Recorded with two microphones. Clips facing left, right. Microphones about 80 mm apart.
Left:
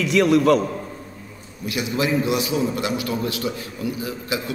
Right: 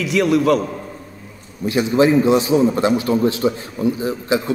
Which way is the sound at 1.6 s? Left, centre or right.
Right.